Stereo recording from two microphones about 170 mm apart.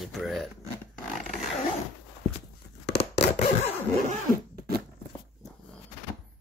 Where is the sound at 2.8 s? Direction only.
85° left.